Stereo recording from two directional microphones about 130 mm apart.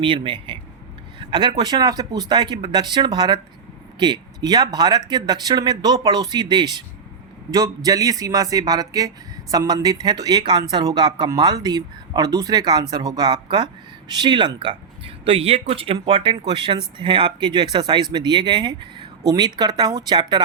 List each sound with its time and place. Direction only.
0.0 s speech: 40° right (ahead or behind)